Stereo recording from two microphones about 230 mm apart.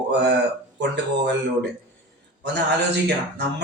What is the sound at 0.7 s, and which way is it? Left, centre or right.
Speech, right.